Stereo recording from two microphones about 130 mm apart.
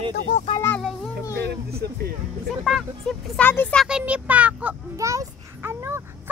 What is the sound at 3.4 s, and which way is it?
Speech, 15° left (ahead or behind).